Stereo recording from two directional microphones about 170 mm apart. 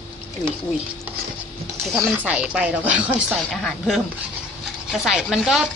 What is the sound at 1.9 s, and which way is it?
A woman's voice, 5° right (ahead or behind).